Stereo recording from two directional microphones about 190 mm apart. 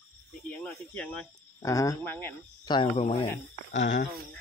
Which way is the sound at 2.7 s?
25° left (ahead or behind).